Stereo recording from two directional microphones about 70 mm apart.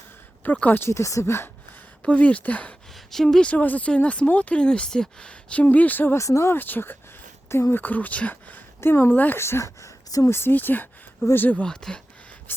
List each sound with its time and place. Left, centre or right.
0.4 s speech: left
0.8 s speech: left
2.0 s speech: centre
3.1 s speech: centre
3.5 s speech: left
6.1 s speech: left
6.5 s speech: left
9.4 s speech: left
10.2 s speech: left
11.6 s speech: centre
12.5 s a sound: left